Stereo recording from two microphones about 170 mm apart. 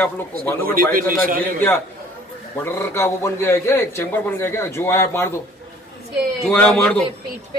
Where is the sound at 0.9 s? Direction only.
55° right (ahead or behind).